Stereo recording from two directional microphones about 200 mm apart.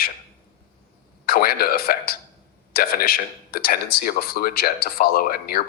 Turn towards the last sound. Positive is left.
turn(degrees=50)  # may be behind; listen again after turning